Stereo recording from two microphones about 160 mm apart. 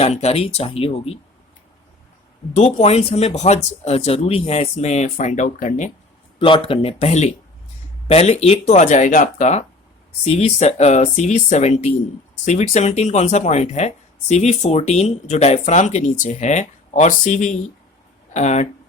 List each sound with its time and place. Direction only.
0.0 s speech: 40° left (ahead or behind)
2.7 s speech: 40° left (ahead or behind)
6.4 s speech: 35° left (ahead or behind)